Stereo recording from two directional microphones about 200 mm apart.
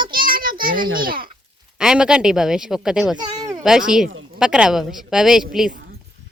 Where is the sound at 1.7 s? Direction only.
5° right (ahead or behind).